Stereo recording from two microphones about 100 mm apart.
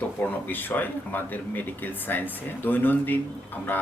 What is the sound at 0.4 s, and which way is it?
Speech, 20° left (ahead or behind).